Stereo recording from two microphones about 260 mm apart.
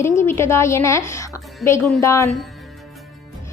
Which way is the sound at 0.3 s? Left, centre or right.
Centre.